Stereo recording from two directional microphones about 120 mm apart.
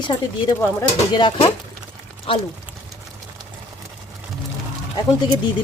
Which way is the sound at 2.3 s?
50° left (ahead or behind).